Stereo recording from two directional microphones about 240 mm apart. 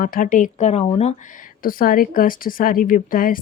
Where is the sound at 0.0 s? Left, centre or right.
Left.